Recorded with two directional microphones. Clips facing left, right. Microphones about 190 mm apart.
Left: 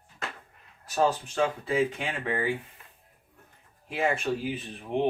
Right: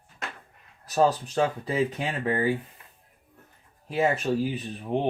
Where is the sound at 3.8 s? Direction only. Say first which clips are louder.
Right 3 dB; 40° right (ahead or behind).